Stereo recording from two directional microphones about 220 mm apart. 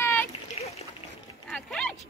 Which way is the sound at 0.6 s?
25° left (ahead or behind).